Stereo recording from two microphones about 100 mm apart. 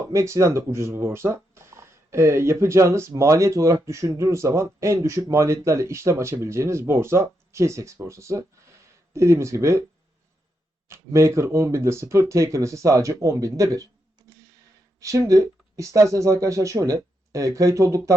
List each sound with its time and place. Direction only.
0.0 s speech: 30° right (ahead or behind)
10.8 s speech: 30° right (ahead or behind)
15.0 s speech: 35° right (ahead or behind)